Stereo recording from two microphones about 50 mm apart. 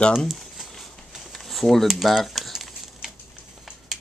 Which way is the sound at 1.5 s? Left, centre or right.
Centre.